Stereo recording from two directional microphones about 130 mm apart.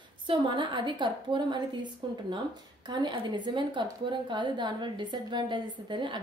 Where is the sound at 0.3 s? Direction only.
40° right (ahead or behind).